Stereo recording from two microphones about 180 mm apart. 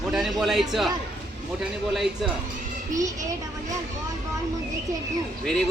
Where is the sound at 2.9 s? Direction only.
20° right (ahead or behind).